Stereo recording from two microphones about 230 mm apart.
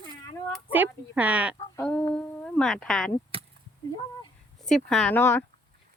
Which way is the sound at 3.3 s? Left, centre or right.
Right.